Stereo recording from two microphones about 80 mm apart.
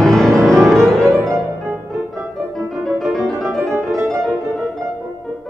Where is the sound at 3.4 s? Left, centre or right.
Right.